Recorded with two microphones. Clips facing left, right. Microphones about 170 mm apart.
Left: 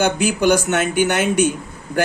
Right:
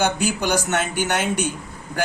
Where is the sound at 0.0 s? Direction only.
55° left (ahead or behind).